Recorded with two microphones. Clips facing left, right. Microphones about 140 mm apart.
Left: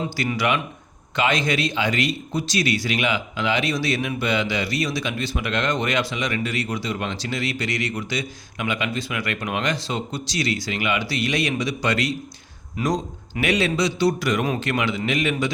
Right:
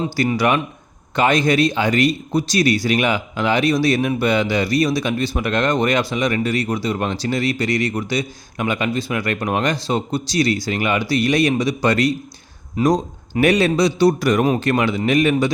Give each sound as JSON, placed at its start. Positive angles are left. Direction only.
{"t": 0.0, "sound": "speech", "side_deg": -35}